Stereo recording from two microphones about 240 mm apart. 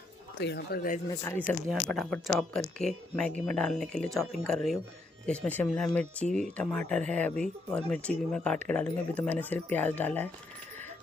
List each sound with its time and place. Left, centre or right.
0.3 s speech: left
1.0 s speech: centre